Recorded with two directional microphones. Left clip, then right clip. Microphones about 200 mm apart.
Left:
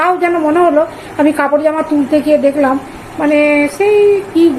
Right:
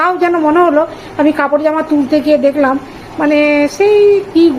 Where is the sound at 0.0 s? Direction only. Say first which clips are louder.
Right 1 dB; 15° right (ahead or behind).